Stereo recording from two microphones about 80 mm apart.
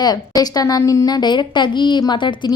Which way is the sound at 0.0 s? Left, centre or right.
Left.